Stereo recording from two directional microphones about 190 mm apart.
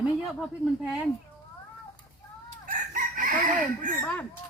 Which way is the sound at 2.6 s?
45° right (ahead or behind).